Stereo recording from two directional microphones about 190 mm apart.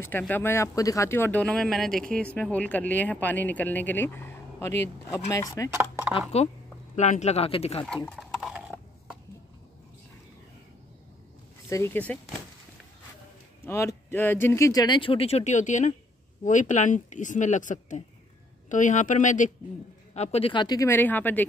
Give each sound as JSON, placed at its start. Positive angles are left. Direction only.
{"t": 0.0, "sound": "speech", "side_deg": 10}
{"t": 5.7, "sound": "speech", "side_deg": -10}
{"t": 7.0, "sound": "a woman's voice", "side_deg": 35}
{"t": 7.8, "sound": "a sound", "side_deg": 5}
{"t": 11.7, "sound": "speech", "side_deg": 10}
{"t": 13.6, "sound": "a woman's voice", "side_deg": 15}